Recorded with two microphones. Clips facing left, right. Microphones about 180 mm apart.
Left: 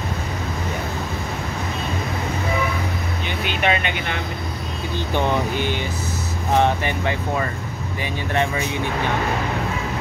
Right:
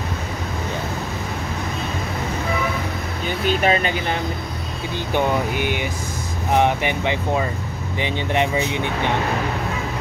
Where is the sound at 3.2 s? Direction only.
40° right (ahead or behind).